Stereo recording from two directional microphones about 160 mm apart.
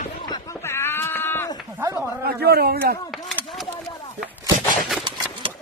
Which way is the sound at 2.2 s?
80° right.